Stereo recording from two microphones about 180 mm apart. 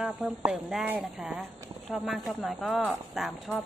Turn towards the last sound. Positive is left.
turn(degrees=0)  # may be behind; listen again after turning